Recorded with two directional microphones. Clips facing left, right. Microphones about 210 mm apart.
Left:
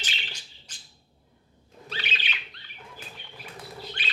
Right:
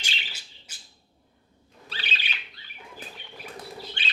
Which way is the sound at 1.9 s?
35° right (ahead or behind).